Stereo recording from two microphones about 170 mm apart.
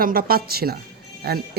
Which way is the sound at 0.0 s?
60° right (ahead or behind).